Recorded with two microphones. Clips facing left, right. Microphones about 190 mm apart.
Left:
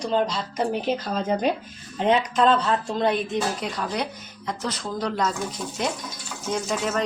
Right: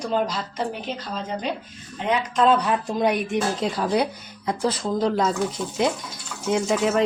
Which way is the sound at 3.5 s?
30° right (ahead or behind).